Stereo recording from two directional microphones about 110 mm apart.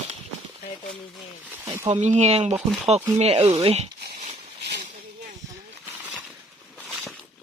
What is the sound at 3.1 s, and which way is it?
Speech, 65° right (ahead or behind).